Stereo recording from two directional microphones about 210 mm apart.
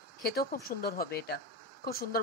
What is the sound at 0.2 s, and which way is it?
A woman's voice, 45° left (ahead or behind).